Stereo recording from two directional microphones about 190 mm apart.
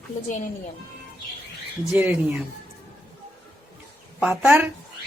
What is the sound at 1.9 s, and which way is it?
Speech, 10° right (ahead or behind).